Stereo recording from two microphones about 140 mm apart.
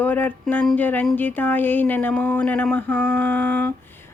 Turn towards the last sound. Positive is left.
turn(degrees=10)  # may be behind; listen again after turning